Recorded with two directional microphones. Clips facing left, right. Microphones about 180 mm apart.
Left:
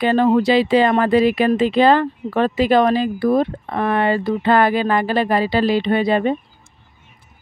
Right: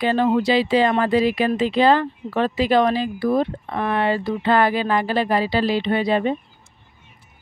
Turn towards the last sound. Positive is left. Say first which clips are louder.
# left 3 dB
turn(degrees=50)  # may be behind; listen again after turning